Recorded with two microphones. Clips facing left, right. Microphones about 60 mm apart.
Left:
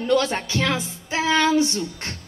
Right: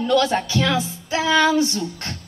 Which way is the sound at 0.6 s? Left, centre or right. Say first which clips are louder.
Right 3 dB; left.